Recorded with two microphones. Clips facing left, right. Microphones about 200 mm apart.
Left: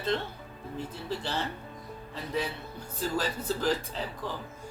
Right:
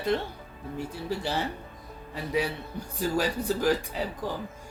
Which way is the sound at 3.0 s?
15° right (ahead or behind).